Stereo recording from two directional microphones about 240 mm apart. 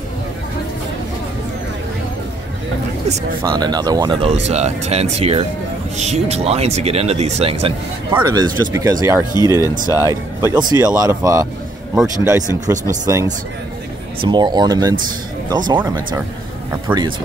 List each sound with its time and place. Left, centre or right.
3.4 s speech: centre
8.1 s speech: centre